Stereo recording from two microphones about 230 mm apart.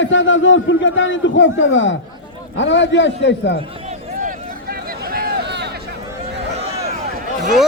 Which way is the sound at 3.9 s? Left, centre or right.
Right.